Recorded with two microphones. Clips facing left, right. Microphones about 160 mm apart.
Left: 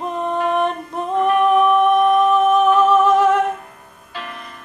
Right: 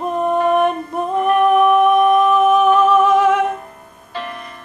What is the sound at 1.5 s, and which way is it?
Humming, 5° right (ahead or behind).